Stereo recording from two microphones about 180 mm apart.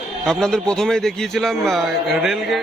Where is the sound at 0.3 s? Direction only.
5° left (ahead or behind).